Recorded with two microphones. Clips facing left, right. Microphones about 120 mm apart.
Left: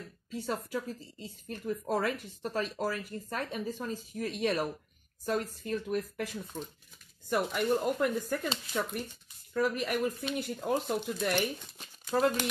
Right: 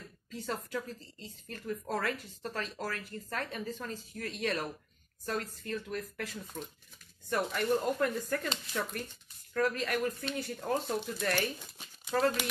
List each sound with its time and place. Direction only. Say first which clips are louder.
0.3 s speech: left 3 dB; 15° left (ahead or behind)